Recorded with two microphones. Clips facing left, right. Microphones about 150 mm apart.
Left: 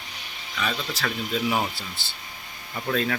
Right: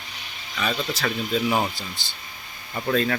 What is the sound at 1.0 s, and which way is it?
Speech, centre (ahead or behind).